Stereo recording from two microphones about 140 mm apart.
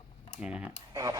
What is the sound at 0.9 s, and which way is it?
Speech, 25° right (ahead or behind).